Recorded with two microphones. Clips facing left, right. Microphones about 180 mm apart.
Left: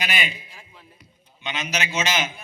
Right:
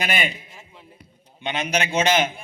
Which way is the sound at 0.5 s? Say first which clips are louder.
Right 2 dB; 25° right (ahead or behind).